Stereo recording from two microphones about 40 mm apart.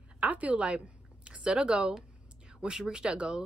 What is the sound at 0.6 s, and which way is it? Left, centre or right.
A woman's voice, right.